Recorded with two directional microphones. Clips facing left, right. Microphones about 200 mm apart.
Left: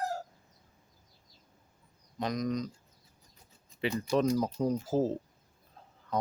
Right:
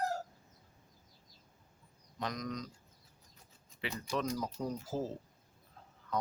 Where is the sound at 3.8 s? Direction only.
30° left (ahead or behind).